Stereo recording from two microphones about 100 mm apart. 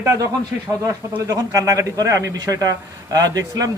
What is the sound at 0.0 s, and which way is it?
Speech, 30° right (ahead or behind).